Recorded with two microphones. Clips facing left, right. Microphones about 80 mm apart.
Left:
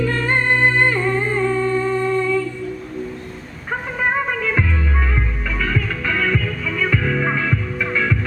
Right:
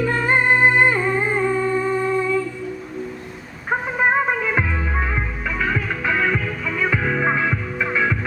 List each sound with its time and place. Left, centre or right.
0.0 s music: centre
3.7 s music: centre